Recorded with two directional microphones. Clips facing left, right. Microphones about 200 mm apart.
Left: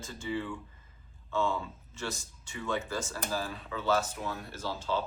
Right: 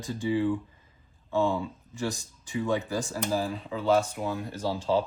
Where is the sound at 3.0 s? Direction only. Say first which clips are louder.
Right 6 dB; 30° right (ahead or behind).